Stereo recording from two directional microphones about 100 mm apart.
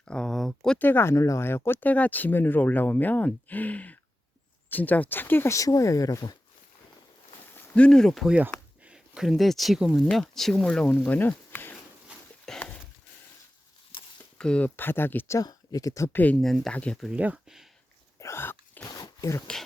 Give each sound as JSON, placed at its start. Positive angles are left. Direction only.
{"t": 0.0, "sound": "a sound", "side_deg": 10}
{"t": 0.8, "sound": "speech", "side_deg": 20}
{"t": 7.8, "sound": "speech", "side_deg": 5}
{"t": 8.8, "sound": "speech", "side_deg": -10}
{"t": 12.5, "sound": "a sound", "side_deg": 5}
{"t": 14.3, "sound": "speech", "side_deg": 10}
{"t": 15.4, "sound": "speech", "side_deg": 35}
{"t": 16.1, "sound": "speech", "side_deg": 15}
{"t": 16.4, "sound": "speech", "side_deg": 0}
{"t": 17.1, "sound": "speech", "side_deg": -10}
{"t": 18.2, "sound": "dog", "side_deg": 25}
{"t": 18.9, "sound": "zipper", "side_deg": 35}